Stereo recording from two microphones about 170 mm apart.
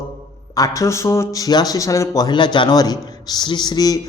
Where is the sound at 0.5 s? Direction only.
20° left (ahead or behind).